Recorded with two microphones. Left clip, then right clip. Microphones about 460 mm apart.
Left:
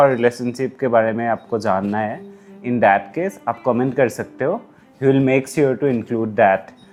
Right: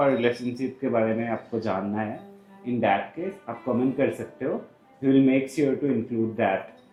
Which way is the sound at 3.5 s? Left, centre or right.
Left.